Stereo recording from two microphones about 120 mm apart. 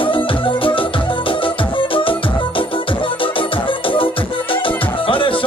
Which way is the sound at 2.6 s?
45° left (ahead or behind).